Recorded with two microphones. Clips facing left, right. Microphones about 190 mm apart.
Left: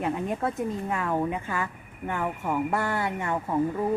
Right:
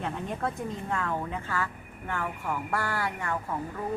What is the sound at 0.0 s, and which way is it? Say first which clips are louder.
A woman's voice: left 4 dB; 10° left (ahead or behind).